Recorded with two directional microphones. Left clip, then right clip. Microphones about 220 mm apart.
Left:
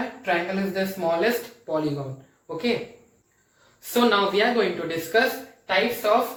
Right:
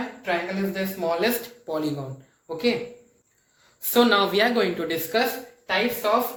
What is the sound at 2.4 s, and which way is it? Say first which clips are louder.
Speech: right 3 dB; 45° right (ahead or behind).